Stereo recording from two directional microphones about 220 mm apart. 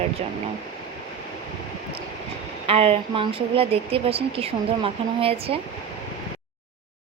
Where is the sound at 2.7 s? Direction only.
25° right (ahead or behind).